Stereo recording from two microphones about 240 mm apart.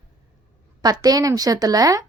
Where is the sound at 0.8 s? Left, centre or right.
Centre.